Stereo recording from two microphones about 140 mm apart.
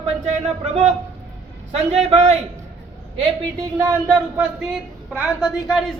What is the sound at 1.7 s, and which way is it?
Speech, 45° right (ahead or behind).